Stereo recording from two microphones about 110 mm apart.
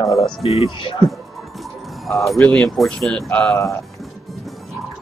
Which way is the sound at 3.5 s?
25° left (ahead or behind).